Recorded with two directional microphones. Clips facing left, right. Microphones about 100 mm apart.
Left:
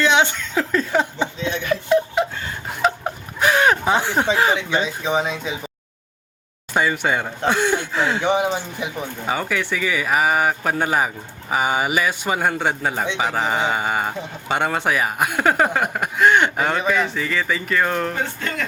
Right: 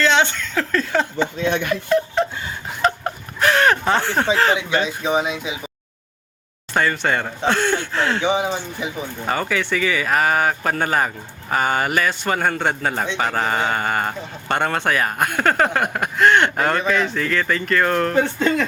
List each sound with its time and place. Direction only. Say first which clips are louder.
0.0 s speech: even; 10° left (ahead or behind)
1.4 s speech: right 4 dB; 60° right (ahead or behind)
2.2 s a sound: right 1 dB; 5° left (ahead or behind)
4.9 s speech: right 1 dB; 15° right (ahead or behind)
6.7 s a man's voice: even; 10° left (ahead or behind)
18.3 s speech: right 9 dB; 20° right (ahead or behind)